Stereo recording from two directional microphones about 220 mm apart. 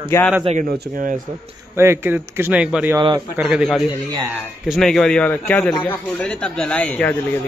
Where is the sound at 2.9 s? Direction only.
20° right (ahead or behind).